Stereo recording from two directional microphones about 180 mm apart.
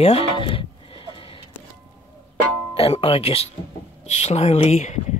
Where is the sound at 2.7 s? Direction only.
30° left (ahead or behind).